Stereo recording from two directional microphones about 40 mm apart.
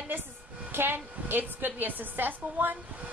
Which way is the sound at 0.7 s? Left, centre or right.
Right.